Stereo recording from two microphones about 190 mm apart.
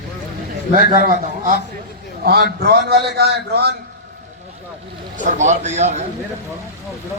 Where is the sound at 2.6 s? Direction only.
55° right (ahead or behind).